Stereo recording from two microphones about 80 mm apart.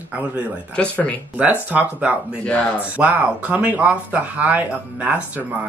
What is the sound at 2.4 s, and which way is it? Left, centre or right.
Speech, centre.